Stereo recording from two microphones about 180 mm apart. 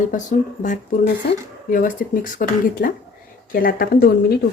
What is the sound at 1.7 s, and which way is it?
A woman's voice, 50° left (ahead or behind).